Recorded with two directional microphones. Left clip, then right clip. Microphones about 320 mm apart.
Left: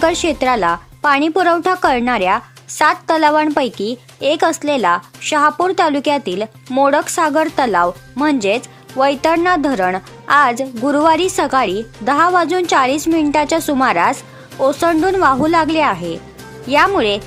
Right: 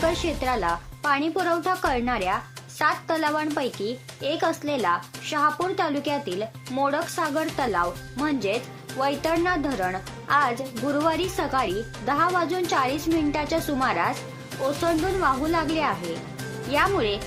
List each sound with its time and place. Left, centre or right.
0.0 s speech: left